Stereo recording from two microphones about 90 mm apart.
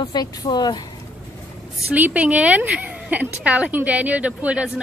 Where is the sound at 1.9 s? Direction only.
15° right (ahead or behind).